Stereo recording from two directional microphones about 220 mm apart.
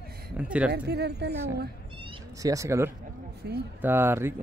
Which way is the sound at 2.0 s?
15° right (ahead or behind).